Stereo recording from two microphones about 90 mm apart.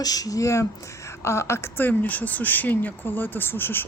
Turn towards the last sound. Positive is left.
turn(degrees=25)  # may be behind; listen again after turning